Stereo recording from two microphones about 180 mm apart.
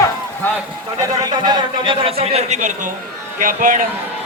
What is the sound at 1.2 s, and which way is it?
A man's voice, 25° right (ahead or behind).